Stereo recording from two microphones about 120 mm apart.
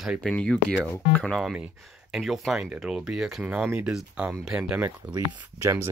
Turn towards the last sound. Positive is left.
turn(degrees=-20)  # may be behind; listen again after turning